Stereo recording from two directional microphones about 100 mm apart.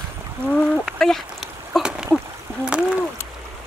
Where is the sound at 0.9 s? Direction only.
5° left (ahead or behind).